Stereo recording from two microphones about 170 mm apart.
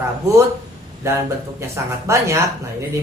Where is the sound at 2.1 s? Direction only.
15° right (ahead or behind).